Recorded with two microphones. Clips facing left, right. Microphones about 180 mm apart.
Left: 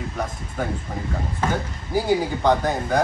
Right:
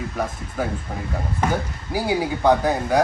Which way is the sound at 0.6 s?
5° right (ahead or behind).